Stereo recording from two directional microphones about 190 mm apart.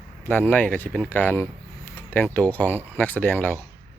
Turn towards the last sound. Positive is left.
turn(degrees=10)  # may be behind; listen again after turning